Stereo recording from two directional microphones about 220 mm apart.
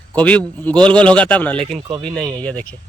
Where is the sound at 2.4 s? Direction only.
5° left (ahead or behind).